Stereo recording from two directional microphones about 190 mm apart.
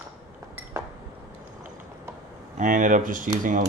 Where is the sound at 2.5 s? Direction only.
45° right (ahead or behind).